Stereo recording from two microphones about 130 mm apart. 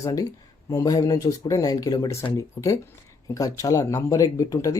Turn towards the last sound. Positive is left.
turn(degrees=25)  # may be behind; listen again after turning